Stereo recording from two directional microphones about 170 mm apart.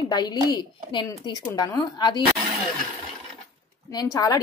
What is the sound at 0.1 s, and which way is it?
Speech, 25° left (ahead or behind).